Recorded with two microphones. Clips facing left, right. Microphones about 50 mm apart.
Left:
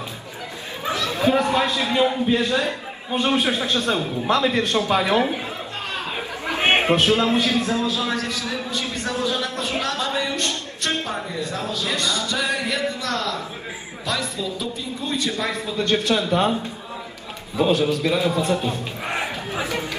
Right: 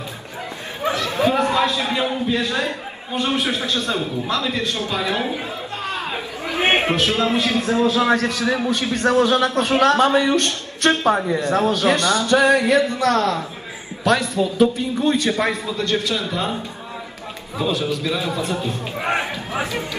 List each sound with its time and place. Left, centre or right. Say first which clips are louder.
0.8 s chatter: right 2 dB; right
1.8 s a man's voice: left 2 dB; right
3.4 s a man's voice: left 1 dB; left
5.9 s chatter: right 3 dB; right
6.6 s a sound: even; right
7.1 s a man's voice: even; right
15.8 s a man's voice: left 3 dB; left
17.6 s a man's voice: left 3 dB; left
19.0 s a sound: right 4 dB; right